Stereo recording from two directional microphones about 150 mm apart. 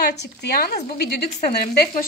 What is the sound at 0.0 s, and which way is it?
Frying, 90° left.